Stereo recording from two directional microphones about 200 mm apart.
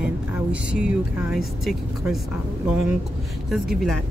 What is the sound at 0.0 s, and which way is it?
Speech, 5° right (ahead or behind).